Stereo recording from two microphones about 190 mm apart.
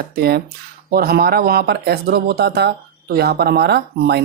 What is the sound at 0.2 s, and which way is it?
Speech, 55° right (ahead or behind).